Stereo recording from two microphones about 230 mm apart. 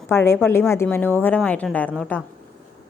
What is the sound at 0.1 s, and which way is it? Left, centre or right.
A woman's voice, centre.